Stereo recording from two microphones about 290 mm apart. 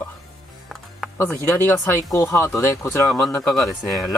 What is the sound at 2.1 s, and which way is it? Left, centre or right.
Speech, centre.